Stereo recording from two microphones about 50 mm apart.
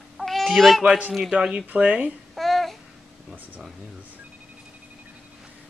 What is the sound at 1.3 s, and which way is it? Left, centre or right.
Speech, centre.